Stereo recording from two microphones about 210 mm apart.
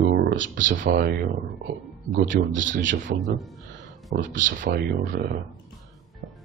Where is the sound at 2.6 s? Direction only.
60° right (ahead or behind).